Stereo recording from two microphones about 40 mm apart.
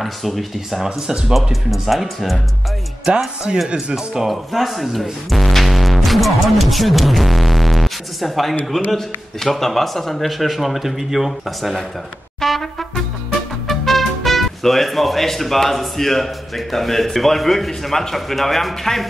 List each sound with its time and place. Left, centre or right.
0.0 s speech: centre
0.8 s speech: centre
1.3 s speech: centre
3.1 s speech: right
3.6 s speech: centre
4.3 s speech: centre
12.4 s trumpet: centre
13.7 s speech: centre